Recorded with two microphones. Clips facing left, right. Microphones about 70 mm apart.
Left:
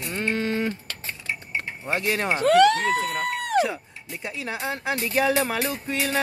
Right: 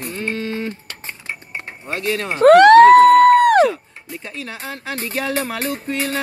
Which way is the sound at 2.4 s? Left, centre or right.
Right.